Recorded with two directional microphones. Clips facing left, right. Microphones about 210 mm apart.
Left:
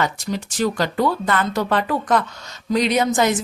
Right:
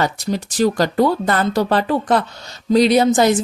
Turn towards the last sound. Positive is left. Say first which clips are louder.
# right 5 dB
turn(degrees=-35)  # may be behind; listen again after turning